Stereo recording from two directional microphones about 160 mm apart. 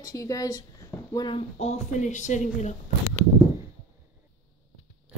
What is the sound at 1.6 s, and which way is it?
Speech, 45° left (ahead or behind).